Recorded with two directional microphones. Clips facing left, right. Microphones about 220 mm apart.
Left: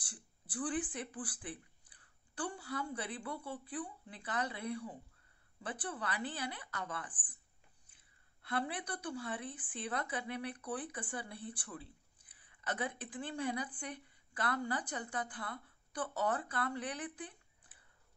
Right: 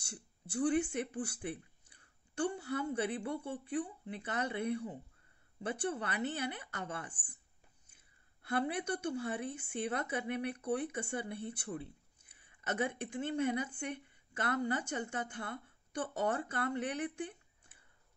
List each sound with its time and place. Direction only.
0.0 s speech: 25° right (ahead or behind)
8.7 s a woman's voice: 25° right (ahead or behind)